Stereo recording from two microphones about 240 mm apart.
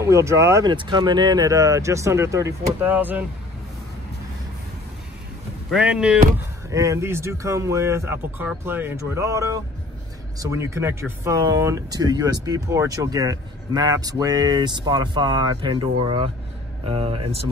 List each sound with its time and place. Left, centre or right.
0.0 s speech: centre
5.7 s speech: centre; by 17.5 s right